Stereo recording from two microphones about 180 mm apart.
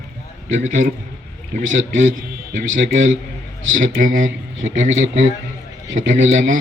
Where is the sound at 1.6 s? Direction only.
90° right.